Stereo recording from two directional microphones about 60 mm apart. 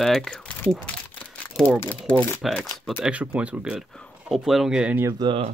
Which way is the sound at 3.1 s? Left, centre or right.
Right.